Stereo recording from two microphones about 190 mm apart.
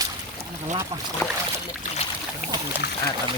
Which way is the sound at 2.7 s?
10° right (ahead or behind).